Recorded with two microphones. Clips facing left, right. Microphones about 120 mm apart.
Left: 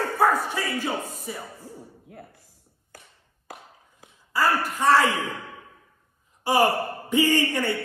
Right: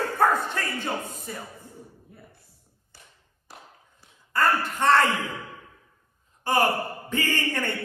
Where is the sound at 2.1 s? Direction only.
75° left (ahead or behind).